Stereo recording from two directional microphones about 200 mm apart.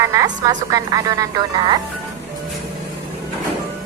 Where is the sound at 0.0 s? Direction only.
15° right (ahead or behind).